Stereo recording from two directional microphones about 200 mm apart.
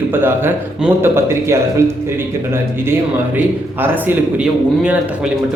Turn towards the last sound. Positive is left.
turn(degrees=-5)  # may be behind; listen again after turning